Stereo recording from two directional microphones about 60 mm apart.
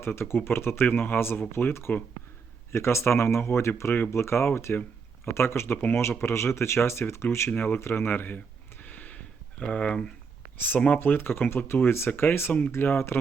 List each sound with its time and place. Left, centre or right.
0.0 s speech: left
6.0 s speech: left
8.8 s a sound: left
10.8 s speech: left